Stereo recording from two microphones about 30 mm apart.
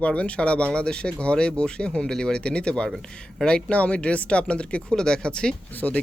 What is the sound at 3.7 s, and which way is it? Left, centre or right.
Speech, left.